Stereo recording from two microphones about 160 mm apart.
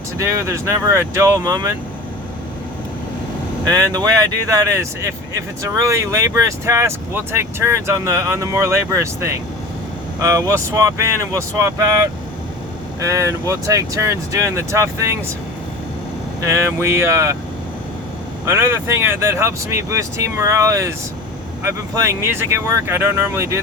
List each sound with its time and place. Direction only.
0.2 s speech: 20° right (ahead or behind)
3.6 s speech: 20° right (ahead or behind)
16.5 s speech: 15° right (ahead or behind)
18.4 s speech: 15° right (ahead or behind)